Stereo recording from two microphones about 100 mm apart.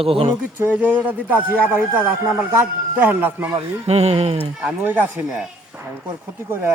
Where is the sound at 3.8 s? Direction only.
90° right.